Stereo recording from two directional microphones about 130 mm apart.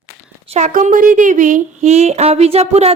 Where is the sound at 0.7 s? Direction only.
85° right; by 2.9 s 50° right (ahead or behind).